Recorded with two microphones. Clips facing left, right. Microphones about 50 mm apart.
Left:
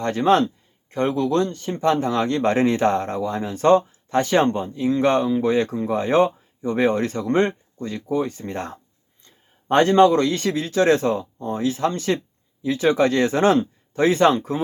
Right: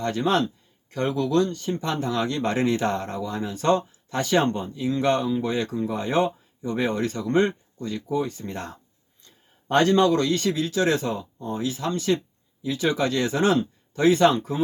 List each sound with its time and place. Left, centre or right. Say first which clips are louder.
0.0 s speech: left 5 dB; left